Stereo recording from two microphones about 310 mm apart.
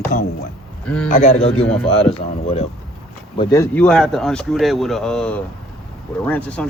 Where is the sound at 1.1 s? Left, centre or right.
Left.